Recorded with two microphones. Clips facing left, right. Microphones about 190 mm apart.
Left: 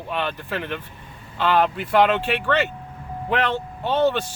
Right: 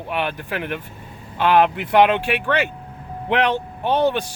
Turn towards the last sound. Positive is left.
turn(degrees=-15)  # may be behind; listen again after turning